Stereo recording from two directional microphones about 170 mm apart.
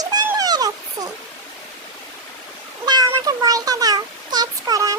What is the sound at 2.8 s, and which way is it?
Meow, 25° right (ahead or behind).